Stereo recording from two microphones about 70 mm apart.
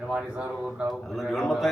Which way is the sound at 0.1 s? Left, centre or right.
Centre.